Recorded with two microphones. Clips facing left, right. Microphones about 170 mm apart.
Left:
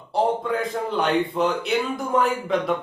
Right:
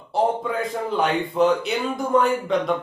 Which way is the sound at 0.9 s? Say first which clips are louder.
Left 1 dB; centre (ahead or behind).